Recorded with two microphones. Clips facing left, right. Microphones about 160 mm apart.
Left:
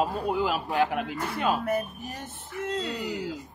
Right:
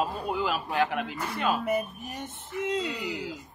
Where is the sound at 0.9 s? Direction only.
10° left (ahead or behind).